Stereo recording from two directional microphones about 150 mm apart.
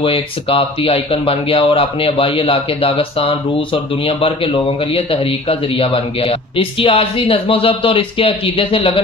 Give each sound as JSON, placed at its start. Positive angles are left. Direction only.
{"t": 0.0, "sound": "a man's voice", "side_deg": 40}